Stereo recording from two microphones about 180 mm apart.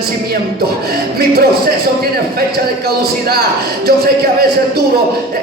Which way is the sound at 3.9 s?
60° right (ahead or behind).